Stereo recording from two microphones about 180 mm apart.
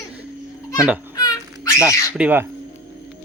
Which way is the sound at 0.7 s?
5° right (ahead or behind).